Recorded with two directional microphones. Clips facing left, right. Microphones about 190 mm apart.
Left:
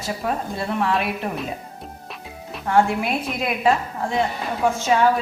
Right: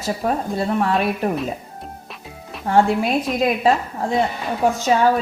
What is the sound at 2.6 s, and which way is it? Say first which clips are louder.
Speech: right 2 dB; 35° right (ahead or behind).